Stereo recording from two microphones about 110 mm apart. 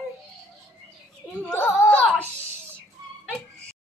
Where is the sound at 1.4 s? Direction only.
15° left (ahead or behind).